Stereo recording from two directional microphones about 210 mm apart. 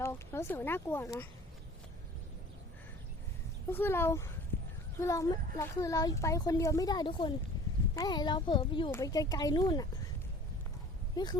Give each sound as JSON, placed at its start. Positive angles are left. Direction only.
{"t": 0.0, "sound": "a child's voice", "side_deg": 15}
{"t": 3.7, "sound": "a child's voice", "side_deg": 10}
{"t": 11.2, "sound": "a child's voice", "side_deg": 20}